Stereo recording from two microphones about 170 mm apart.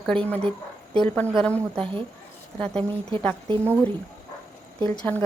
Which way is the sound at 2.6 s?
5° left (ahead or behind).